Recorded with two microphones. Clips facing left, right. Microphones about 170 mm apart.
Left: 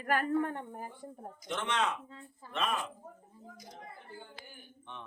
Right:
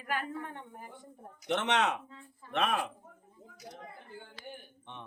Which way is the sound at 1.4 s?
70° right (ahead or behind).